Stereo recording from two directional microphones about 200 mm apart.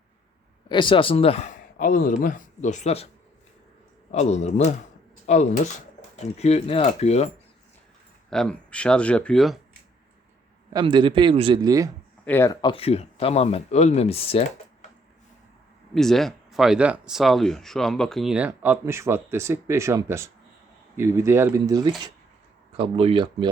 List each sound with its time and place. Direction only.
0.7 s a man's voice: 25° left (ahead or behind)
4.1 s a man's voice: 35° left (ahead or behind)
8.3 s speech: 5° left (ahead or behind)
10.7 s a man's voice: 20° right (ahead or behind)
12.2 s speech: 10° left (ahead or behind); by 14.4 s 30° left (ahead or behind)
16.0 s a man's voice: centre (ahead or behind); by 23.5 s 25° right (ahead or behind)